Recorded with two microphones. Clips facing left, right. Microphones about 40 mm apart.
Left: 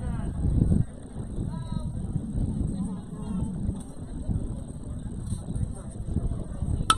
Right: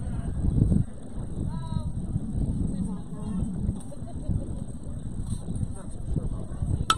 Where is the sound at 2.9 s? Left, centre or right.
Left.